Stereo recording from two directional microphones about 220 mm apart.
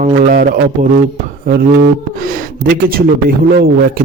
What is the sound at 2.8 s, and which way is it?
Speech, 40° right (ahead or behind).